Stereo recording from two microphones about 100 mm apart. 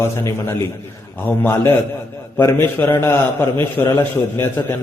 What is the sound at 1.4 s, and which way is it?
A man's voice, 25° left (ahead or behind).